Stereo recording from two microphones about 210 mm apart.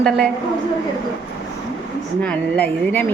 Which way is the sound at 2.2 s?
5° left (ahead or behind).